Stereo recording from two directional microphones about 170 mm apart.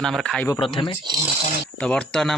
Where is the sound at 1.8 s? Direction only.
5° left (ahead or behind).